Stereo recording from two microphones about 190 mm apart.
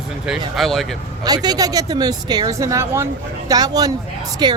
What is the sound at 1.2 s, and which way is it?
Speech, 20° right (ahead or behind).